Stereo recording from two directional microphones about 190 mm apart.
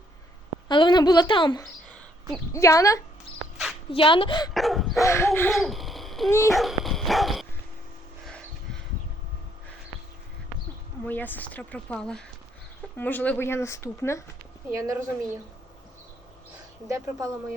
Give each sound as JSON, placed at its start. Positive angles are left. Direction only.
{"t": 0.7, "sound": "a woman's voice", "side_deg": 25}
{"t": 3.9, "sound": "a woman's voice", "side_deg": 25}
{"t": 4.5, "sound": "dog", "side_deg": 0}
{"t": 5.0, "sound": "speech", "side_deg": 15}
{"t": 5.5, "sound": "a sound", "side_deg": 0}
{"t": 6.5, "sound": "dog", "side_deg": 0}
{"t": 8.2, "sound": "a sound", "side_deg": 5}
{"t": 11.0, "sound": "speech", "side_deg": 10}
{"t": 14.7, "sound": "speech", "side_deg": -15}
{"t": 16.9, "sound": "speech", "side_deg": -15}